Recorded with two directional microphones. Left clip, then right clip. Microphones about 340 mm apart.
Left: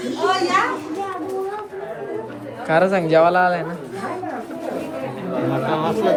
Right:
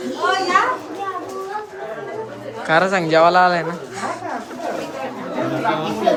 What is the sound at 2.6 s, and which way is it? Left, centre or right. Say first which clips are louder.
A man's voice: right 1 dB; centre.